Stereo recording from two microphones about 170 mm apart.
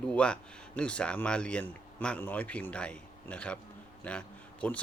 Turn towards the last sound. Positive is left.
turn(degrees=5)  # may be behind; listen again after turning